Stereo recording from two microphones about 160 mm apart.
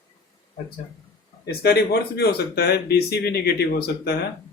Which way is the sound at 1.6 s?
90° left.